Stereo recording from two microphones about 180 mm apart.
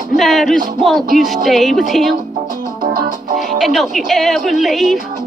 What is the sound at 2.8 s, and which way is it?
Music, 50° right (ahead or behind).